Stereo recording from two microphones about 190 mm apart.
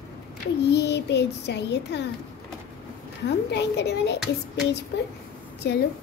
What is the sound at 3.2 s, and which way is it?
A child's voice, 65° left (ahead or behind).